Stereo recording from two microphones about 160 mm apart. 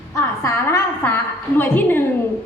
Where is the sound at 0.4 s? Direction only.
15° left (ahead or behind).